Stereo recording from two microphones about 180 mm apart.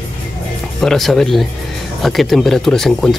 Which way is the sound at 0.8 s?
Centre (ahead or behind).